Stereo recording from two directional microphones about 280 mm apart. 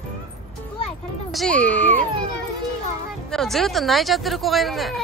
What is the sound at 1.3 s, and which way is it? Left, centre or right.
Speech, centre.